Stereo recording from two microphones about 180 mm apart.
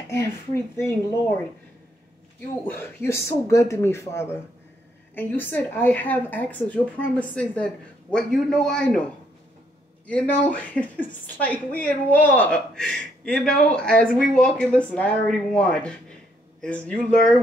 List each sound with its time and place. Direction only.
0.7 s a woman's voice: 15° left (ahead or behind)
2.6 s a woman's voice: 10° left (ahead or behind)
10.0 s a woman's voice: 5° left (ahead or behind)